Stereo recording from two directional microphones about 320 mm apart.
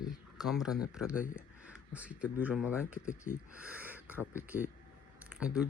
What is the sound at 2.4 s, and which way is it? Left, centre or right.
Speech, centre.